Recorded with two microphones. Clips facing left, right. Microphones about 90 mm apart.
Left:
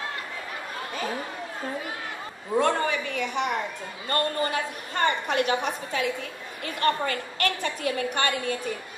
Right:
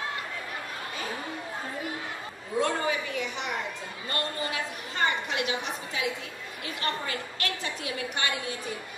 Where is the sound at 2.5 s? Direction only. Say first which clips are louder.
Left 4 dB; 55° left (ahead or behind).